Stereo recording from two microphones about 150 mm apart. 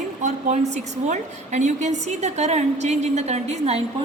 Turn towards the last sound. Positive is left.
turn(degrees=-45)  # may be behind; listen again after turning